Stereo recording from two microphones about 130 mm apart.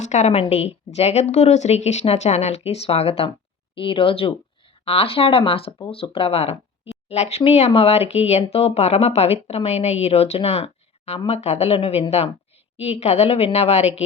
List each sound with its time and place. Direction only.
0.0 s a woman's voice: 65° left (ahead or behind)